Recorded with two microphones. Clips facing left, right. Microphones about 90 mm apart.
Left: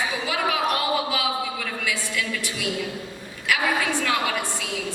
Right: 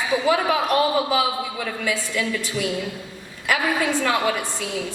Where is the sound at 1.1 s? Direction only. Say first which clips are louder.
Right 4 dB; 40° right (ahead or behind).